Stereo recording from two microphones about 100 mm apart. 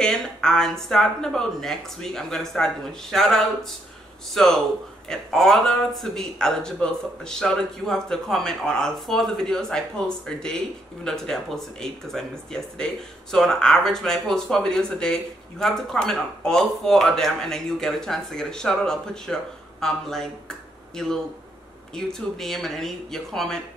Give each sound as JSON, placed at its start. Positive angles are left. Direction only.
{"t": 0.0, "sound": "speech", "side_deg": 5}